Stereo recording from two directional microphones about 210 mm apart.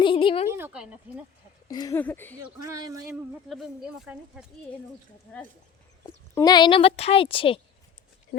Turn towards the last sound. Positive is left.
turn(degrees=25)  # may be behind; listen again after turning